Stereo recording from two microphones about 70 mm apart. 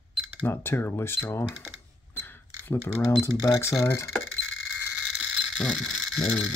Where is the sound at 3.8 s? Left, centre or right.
Left.